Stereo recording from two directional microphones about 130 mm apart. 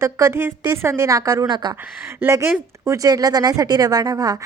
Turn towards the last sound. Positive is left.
turn(degrees=-30)  # may be behind; listen again after turning